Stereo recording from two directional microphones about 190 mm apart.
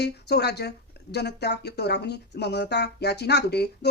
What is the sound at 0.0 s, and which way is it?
Speech, 60° left (ahead or behind).